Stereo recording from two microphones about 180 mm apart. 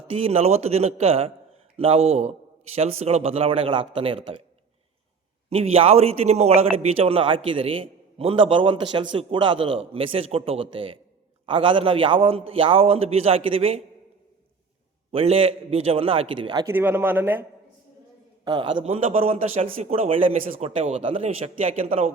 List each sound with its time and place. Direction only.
0.3 s a man's voice: 35° right (ahead or behind)
5.5 s a man's voice: 30° right (ahead or behind)
15.1 s a man's voice: 35° right (ahead or behind)
16.7 s speech: 10° right (ahead or behind)
18.4 s a man's voice: 25° right (ahead or behind)